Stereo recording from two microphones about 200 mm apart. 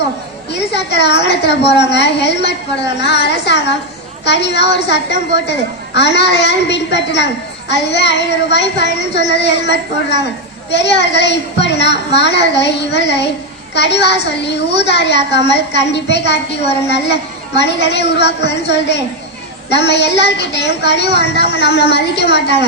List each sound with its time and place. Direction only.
0.5 s a woman's voice: 60° left (ahead or behind)